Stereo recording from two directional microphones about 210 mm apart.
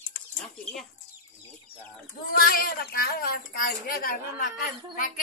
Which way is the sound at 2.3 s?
45° left (ahead or behind).